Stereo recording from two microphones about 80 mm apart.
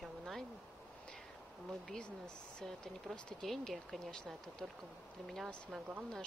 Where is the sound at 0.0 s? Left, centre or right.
Centre.